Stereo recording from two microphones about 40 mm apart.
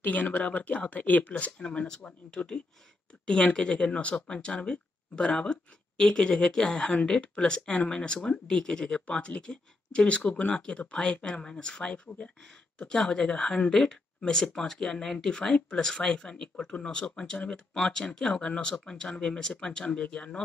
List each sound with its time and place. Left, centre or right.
0.0 s speech: left
1.6 s speech: left
6.8 s speech: left; by 15.3 s centre
15.3 s speech: left